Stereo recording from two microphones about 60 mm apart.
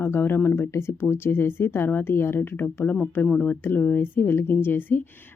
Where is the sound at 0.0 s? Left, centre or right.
Left.